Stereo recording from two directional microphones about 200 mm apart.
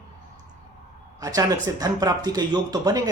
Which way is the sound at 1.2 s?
15° right (ahead or behind).